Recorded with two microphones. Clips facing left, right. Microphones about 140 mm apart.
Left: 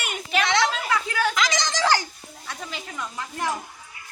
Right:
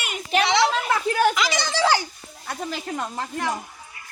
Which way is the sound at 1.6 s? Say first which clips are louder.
Right 2 dB; 10° right (ahead or behind).